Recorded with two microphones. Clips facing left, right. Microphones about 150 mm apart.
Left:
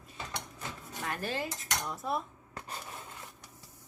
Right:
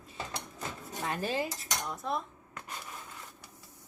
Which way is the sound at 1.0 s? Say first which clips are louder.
Right 3 dB; 15° right (ahead or behind).